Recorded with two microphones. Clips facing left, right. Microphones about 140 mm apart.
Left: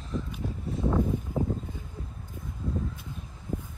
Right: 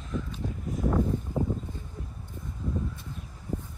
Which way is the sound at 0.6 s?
25° left (ahead or behind).